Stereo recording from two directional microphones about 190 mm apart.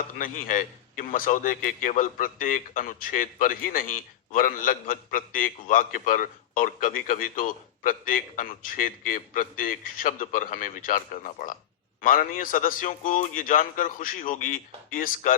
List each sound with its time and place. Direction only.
0.2 s a man's voice: 45° left (ahead or behind)